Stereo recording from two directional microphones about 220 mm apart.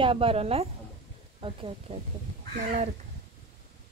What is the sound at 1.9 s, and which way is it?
Speech, 30° right (ahead or behind).